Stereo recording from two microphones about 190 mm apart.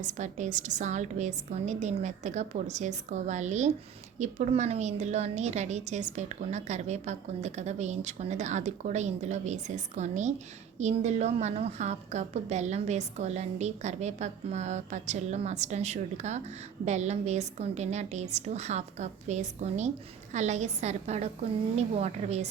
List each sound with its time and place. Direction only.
0.0 s a woman's voice: 40° right (ahead or behind)